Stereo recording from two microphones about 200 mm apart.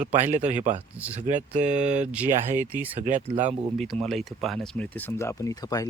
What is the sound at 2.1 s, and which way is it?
Speech, 5° right (ahead or behind).